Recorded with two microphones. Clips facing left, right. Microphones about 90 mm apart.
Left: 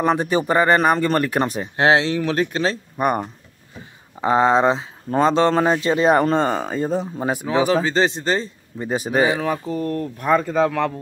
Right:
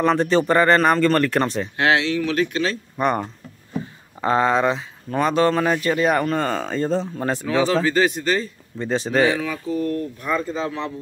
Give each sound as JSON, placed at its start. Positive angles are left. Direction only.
{"t": 0.0, "sound": "speech", "side_deg": 15}
{"t": 1.8, "sound": "speech", "side_deg": 30}
{"t": 3.0, "sound": "speech", "side_deg": 15}
{"t": 8.7, "sound": "speech", "side_deg": 10}
{"t": 9.4, "sound": "speech", "side_deg": 40}
{"t": 10.3, "sound": "speech", "side_deg": 60}